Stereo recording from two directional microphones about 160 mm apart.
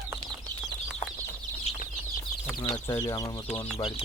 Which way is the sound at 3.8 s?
35° left (ahead or behind).